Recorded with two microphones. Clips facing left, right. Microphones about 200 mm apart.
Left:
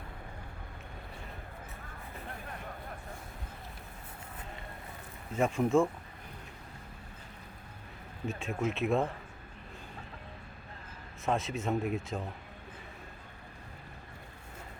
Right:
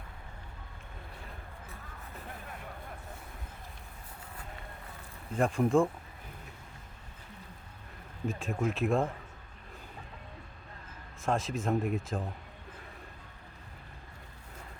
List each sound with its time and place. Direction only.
5.3 s speech: centre (ahead or behind)
8.3 s speech: centre (ahead or behind)
11.3 s speech: centre (ahead or behind)